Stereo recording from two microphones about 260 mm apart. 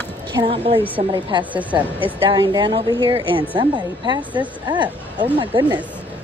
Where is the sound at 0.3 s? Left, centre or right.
Centre.